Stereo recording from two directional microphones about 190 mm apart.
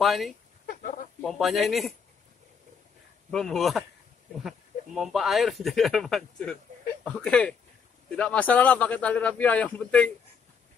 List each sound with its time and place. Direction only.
0.0 s speech: centre (ahead or behind)
3.3 s a man's voice: 5° left (ahead or behind)